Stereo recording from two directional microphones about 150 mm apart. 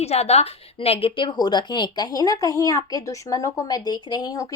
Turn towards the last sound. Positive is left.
turn(degrees=25)  # may be behind; listen again after turning